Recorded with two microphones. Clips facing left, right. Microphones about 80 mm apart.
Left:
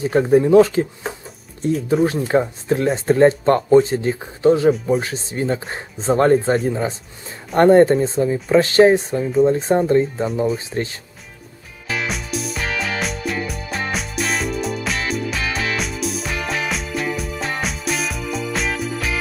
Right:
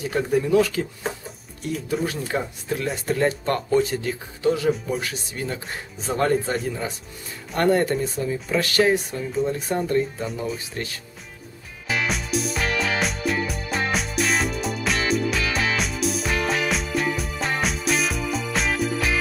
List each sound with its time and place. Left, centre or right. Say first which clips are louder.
0.0 s speech: left 8 dB; left
12.1 s music: even; centre